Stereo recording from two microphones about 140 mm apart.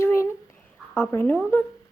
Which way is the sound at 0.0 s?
20° left (ahead or behind).